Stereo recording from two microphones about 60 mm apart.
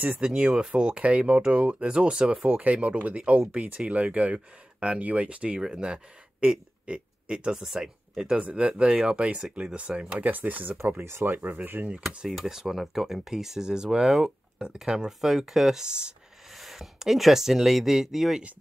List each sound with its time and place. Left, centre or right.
0.2 s speech: centre
11.1 s speech: right
11.3 s speech: right
12.3 s speech: centre
16.5 s speech: centre